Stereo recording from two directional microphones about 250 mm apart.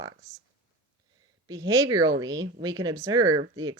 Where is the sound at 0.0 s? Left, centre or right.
Centre.